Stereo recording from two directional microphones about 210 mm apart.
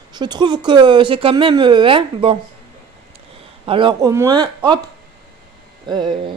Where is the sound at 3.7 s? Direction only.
25° right (ahead or behind).